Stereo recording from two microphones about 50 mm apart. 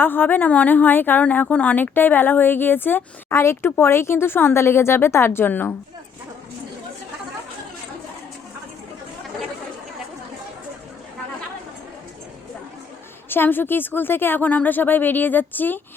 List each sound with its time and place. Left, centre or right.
0.0 s a woman's voice: left
3.3 s speech: left
13.3 s speech: left